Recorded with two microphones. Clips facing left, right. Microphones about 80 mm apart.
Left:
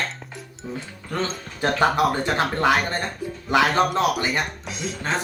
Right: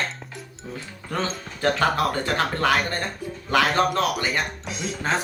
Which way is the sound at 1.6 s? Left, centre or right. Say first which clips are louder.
Left 2 dB; centre.